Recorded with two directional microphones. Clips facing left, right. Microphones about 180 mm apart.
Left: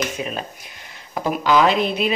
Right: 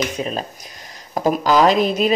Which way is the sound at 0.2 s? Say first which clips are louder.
Right 3 dB; 35° right (ahead or behind).